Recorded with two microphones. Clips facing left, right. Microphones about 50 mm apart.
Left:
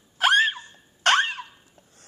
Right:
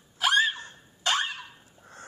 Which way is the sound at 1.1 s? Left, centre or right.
Left.